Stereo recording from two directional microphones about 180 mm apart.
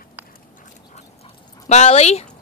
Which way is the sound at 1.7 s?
35° left (ahead or behind).